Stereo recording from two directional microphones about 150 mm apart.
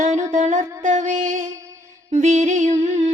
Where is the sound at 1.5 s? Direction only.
20° right (ahead or behind).